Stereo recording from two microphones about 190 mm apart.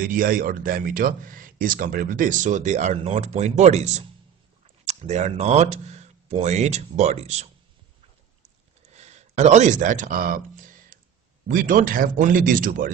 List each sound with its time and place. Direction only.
0.0 s speech: 50° right (ahead or behind)
8.9 s a sound: 35° right (ahead or behind)
11.4 s speech: 45° right (ahead or behind)